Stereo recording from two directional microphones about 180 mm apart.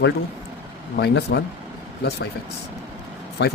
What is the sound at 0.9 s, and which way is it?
Speech, 65° left (ahead or behind).